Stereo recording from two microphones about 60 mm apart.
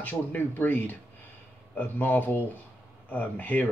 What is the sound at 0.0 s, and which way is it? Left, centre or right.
Speech, left.